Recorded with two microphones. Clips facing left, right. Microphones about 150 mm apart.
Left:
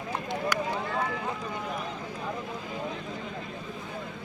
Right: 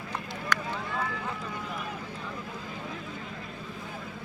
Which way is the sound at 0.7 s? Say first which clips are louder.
Left 3 dB; 35° left (ahead or behind).